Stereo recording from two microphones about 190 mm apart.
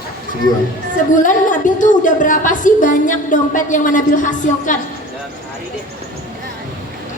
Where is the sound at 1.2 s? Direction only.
45° left (ahead or behind).